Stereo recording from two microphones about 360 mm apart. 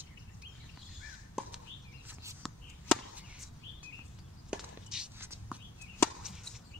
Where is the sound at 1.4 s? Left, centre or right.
Centre.